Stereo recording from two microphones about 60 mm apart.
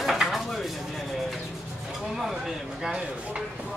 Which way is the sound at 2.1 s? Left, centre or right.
Centre.